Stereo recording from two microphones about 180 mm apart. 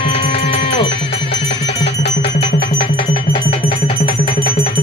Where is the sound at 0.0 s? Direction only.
30° left (ahead or behind).